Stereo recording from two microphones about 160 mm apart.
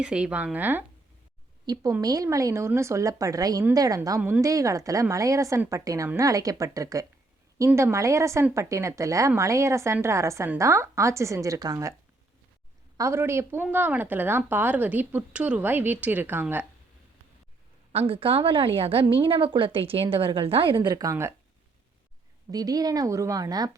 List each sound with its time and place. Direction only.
0.0 s a woman's voice: 5° right (ahead or behind)
1.6 s a woman's voice: 25° right (ahead or behind)
13.0 s a woman's voice: 15° right (ahead or behind)
17.9 s a woman's voice: 35° right (ahead or behind)
20.8 s a woman's voice: 20° right (ahead or behind)
22.5 s a woman's voice: 25° right (ahead or behind)